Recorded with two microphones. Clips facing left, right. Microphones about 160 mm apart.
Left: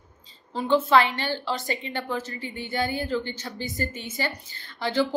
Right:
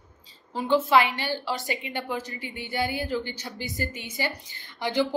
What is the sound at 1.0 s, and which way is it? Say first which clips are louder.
A woman's voice: left 1 dB; 10° right (ahead or behind).